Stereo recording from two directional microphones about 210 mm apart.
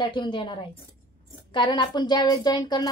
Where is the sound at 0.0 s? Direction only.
20° left (ahead or behind).